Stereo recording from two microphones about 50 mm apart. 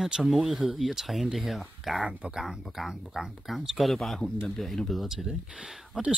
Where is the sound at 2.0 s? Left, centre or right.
Right.